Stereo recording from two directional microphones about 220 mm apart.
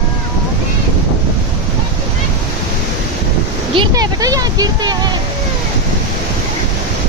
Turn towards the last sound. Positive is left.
turn(degrees=-20)  # may be behind; listen again after turning